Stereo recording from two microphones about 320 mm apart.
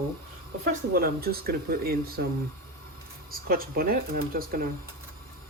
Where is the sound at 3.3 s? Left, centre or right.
Right.